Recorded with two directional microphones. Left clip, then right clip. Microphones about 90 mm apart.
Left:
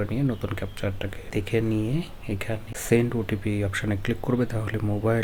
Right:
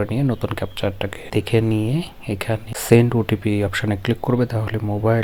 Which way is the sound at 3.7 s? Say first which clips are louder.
Right 6 dB; 50° right (ahead or behind).